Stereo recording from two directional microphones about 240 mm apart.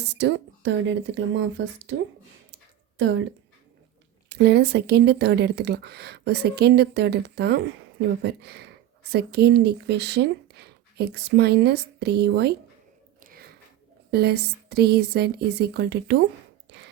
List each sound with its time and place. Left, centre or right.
0.1 s speech: right
3.0 s speech: right
4.3 s speech: right
13.2 s biting: right
14.1 s speech: right
16.7 s a sound: right